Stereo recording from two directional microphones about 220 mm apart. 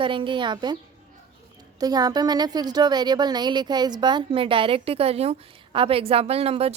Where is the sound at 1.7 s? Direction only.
15° right (ahead or behind).